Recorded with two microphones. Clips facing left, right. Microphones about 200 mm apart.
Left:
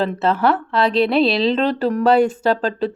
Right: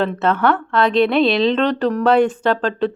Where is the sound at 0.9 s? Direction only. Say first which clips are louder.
Right 1 dB; 35° left (ahead or behind).